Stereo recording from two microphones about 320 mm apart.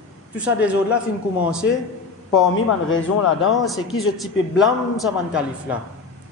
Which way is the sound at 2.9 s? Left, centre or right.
Left.